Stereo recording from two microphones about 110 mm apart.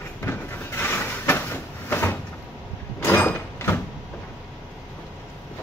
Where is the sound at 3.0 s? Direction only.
15° left (ahead or behind).